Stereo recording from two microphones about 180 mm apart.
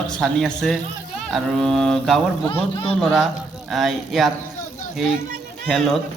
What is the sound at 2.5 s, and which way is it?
Speech, 30° left (ahead or behind).